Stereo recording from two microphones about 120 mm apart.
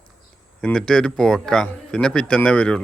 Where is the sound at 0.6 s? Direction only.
5° left (ahead or behind).